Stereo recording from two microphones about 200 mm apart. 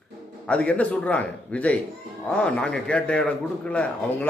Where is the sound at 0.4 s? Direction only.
5° left (ahead or behind).